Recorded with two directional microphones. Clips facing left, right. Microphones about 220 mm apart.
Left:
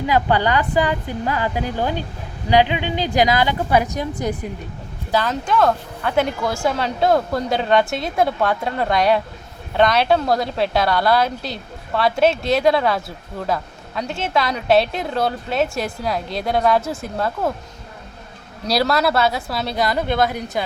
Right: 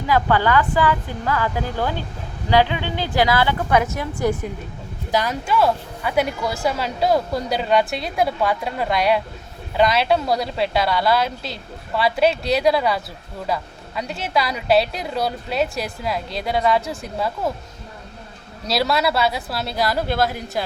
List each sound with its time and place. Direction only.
0.1 s a woman's voice: 20° left (ahead or behind)
5.1 s a woman's voice: 10° right (ahead or behind)
18.7 s a woman's voice: centre (ahead or behind)